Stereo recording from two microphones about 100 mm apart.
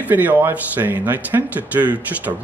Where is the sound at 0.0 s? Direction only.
15° right (ahead or behind).